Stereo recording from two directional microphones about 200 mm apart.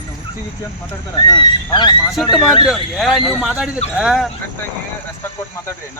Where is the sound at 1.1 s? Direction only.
20° left (ahead or behind).